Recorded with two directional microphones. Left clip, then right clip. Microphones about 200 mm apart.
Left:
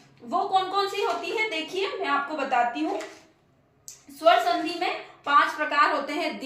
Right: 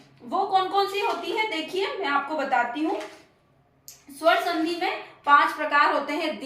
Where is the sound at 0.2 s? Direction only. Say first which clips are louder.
Left 1 dB; 10° left (ahead or behind).